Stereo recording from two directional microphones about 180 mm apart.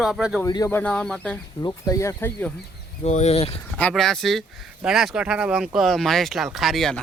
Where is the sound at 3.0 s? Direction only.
40° left (ahead or behind).